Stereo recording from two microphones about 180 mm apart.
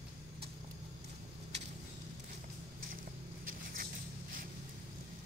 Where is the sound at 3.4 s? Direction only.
50° right (ahead or behind).